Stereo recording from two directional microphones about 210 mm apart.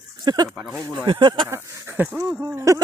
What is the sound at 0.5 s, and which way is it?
Speech, 10° right (ahead or behind).